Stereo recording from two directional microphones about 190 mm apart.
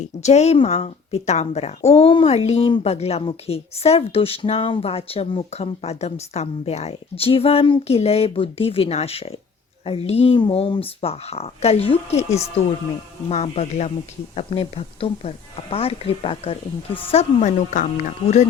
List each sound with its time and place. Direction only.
0.0 s speech: 35° left (ahead or behind)